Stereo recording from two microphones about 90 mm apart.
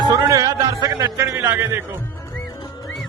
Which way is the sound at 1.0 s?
30° right (ahead or behind).